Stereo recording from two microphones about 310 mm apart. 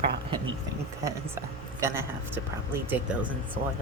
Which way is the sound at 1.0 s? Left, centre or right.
Centre.